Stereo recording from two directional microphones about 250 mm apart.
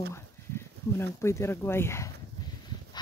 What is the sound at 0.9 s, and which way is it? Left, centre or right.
Speech, centre.